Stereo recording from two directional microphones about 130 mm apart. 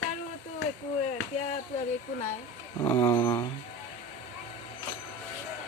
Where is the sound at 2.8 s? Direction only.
20° left (ahead or behind).